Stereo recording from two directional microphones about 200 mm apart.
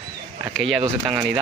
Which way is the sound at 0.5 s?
Centre (ahead or behind).